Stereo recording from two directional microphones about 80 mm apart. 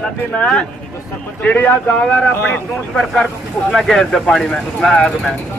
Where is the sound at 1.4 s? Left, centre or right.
Centre.